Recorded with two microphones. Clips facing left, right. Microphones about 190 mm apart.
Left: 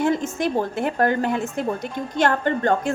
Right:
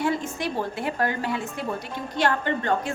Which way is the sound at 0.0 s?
45° left (ahead or behind).